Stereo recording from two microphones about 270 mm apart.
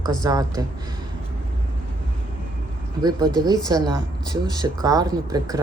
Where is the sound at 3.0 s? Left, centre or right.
Centre.